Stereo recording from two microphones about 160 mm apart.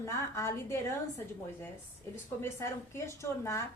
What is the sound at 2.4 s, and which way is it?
Speech, 15° left (ahead or behind).